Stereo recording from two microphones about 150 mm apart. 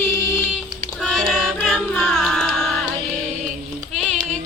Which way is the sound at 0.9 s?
Centre (ahead or behind).